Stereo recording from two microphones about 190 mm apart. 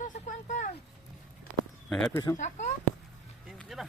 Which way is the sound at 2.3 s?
40° left (ahead or behind).